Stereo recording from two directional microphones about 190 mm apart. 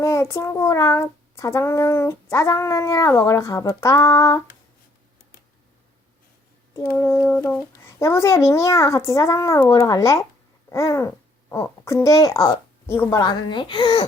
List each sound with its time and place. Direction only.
0.0 s child singing: 15° left (ahead or behind)
6.7 s child singing: 10° left (ahead or behind)
10.7 s speech: 15° left (ahead or behind)